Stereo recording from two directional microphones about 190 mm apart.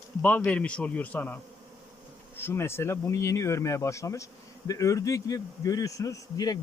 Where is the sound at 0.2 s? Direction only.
5° left (ahead or behind).